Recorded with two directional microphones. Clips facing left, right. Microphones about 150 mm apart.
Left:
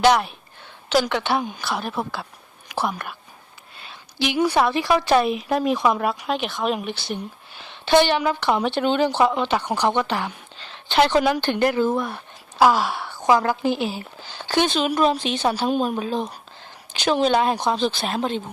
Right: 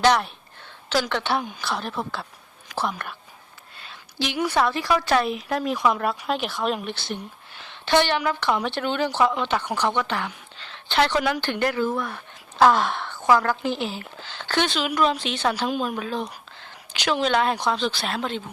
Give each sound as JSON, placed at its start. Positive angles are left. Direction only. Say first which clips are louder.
{"t": 0.0, "sound": "a woman's voice", "louder": "left 2 dB", "side_deg": 5}
{"t": 3.8, "sound": "a sound", "louder": "left 3 dB", "side_deg": 15}
{"t": 4.4, "sound": "speech", "louder": "left 3 dB", "side_deg": 15}
{"t": 6.0, "sound": "speech", "louder": "left 2 dB", "side_deg": 5}
{"t": 7.6, "sound": "a woman's voice", "louder": "left 4 dB", "side_deg": 15}
{"t": 8.4, "sound": "speech", "louder": "left 4 dB", "side_deg": 25}
{"t": 10.6, "sound": "a sound", "louder": "left 3 dB", "side_deg": 15}
{"t": 11.3, "sound": "speech", "louder": "left 4 dB", "side_deg": 20}
{"t": 12.5, "sound": "speech", "louder": "even", "side_deg": 5}
{"t": 15.7, "sound": "speech", "louder": "left 4 dB", "side_deg": 30}
{"t": 17.1, "sound": "speech", "louder": "left 4 dB", "side_deg": 40}
{"t": 17.3, "sound": "speech", "louder": "left 2 dB", "side_deg": 15}